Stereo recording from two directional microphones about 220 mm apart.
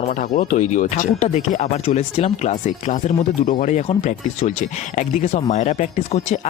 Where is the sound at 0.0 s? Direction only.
35° left (ahead or behind).